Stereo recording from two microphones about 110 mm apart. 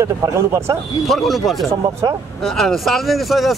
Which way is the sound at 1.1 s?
Centre (ahead or behind).